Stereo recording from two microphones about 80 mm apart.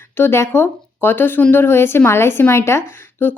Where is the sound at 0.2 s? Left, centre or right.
Left.